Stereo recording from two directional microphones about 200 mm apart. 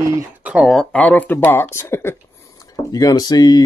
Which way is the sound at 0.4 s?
5° right (ahead or behind).